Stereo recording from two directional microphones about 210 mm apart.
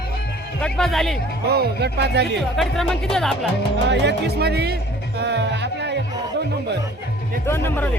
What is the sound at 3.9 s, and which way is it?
Speech, 55° right (ahead or behind).